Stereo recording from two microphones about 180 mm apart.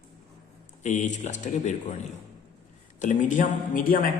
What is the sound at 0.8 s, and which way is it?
Speech, 45° left (ahead or behind).